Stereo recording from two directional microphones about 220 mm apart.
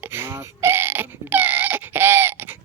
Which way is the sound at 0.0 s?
10° right (ahead or behind).